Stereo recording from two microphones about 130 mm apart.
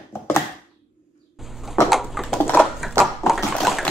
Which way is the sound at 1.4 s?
Centre (ahead or behind).